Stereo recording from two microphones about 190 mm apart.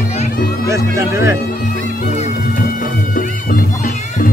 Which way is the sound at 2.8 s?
45° left (ahead or behind).